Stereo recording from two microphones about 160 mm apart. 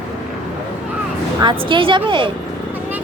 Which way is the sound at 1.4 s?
30° right (ahead or behind).